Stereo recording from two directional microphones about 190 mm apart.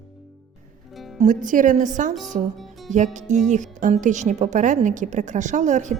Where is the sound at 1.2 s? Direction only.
45° right (ahead or behind).